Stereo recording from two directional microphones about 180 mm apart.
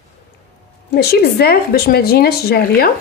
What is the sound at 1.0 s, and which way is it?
Speech, 60° left (ahead or behind).